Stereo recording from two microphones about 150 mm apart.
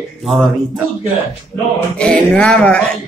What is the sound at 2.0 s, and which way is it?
Speech, 5° left (ahead or behind).